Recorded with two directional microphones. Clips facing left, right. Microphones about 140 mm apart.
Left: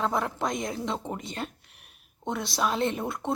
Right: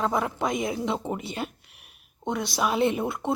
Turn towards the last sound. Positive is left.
turn(degrees=-5)  # may be behind; listen again after turning